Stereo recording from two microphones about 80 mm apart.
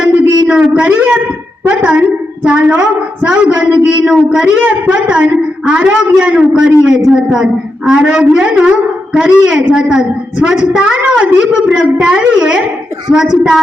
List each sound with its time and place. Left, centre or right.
0.4 s a woman's voice: centre